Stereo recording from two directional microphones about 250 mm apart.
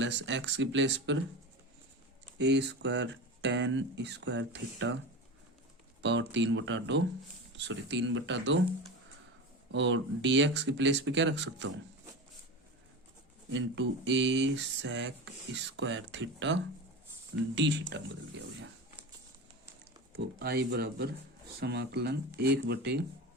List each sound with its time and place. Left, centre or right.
0.0 s speech: right
2.4 s speech: right
6.0 s speech: right
9.7 s speech: right
13.5 s speech: right
20.1 s speech: right